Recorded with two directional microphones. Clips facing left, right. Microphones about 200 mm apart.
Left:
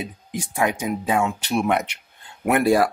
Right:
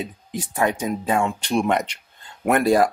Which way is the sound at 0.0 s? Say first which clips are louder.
Right 1 dB; 10° left (ahead or behind).